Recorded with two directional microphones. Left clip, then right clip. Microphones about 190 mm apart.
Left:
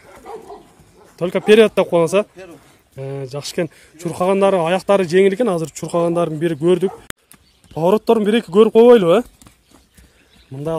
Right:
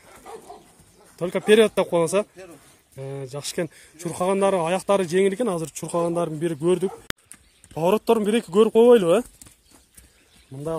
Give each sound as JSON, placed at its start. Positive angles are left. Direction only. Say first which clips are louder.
{"t": 0.3, "sound": "bow-wow", "louder": "left 7 dB", "side_deg": -50}
{"t": 1.1, "sound": "speech", "louder": "left 6 dB", "side_deg": 0}
{"t": 10.5, "sound": "speech", "louder": "left 6 dB", "side_deg": 10}